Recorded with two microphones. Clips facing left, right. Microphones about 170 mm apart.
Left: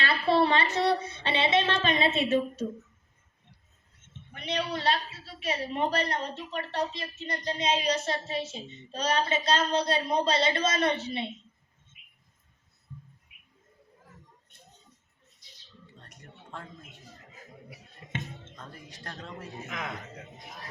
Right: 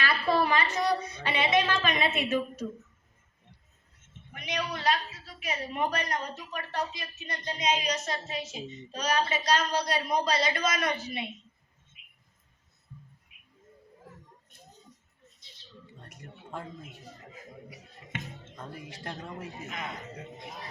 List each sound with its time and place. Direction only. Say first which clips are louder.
0.0 s a woman's voice: left 2 dB; 25° left (ahead or behind)
4.4 s a woman's voice: left 3 dB; 30° left (ahead or behind)
16.0 s a sound: right 4 dB; 10° right (ahead or behind)
19.0 s a man's voice: right 2 dB; 10° right (ahead or behind)